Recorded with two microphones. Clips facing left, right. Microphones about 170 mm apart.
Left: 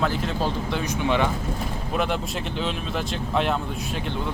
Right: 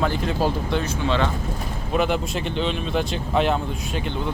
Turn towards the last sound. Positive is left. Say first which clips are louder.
# right 2 dB
turn(degrees=0)  # may be behind; listen again after turning